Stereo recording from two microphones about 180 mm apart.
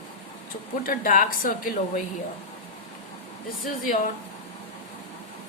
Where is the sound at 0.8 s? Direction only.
50° left (ahead or behind).